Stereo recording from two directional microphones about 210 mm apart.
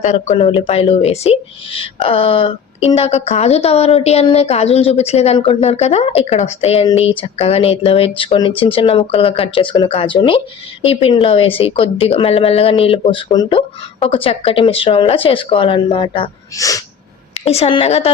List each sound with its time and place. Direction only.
0.0 s speech: 35° left (ahead or behind); by 16.8 s 15° left (ahead or behind)
17.3 s speech: 30° left (ahead or behind)